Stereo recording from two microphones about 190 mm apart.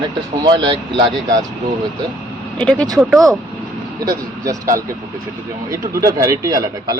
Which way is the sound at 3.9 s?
20° right (ahead or behind).